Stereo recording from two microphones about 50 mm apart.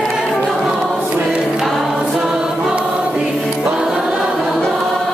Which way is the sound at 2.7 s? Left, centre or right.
Right.